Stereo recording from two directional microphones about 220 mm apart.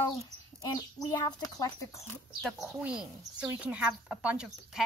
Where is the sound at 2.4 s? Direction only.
Centre (ahead or behind).